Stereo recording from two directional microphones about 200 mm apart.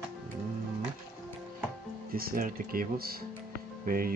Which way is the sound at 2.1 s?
45° right (ahead or behind).